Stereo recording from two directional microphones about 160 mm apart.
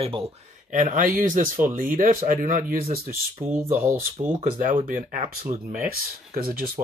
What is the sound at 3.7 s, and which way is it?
Speech, 15° right (ahead or behind).